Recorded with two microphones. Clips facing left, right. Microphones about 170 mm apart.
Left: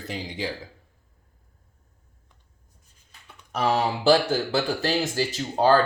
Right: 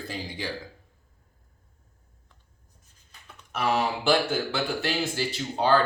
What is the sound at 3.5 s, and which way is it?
Speech, 35° left (ahead or behind).